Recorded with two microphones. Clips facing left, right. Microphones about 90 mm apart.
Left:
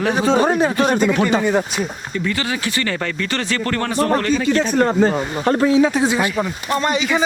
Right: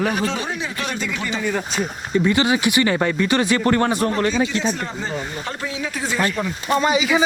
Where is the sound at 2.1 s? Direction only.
20° right (ahead or behind).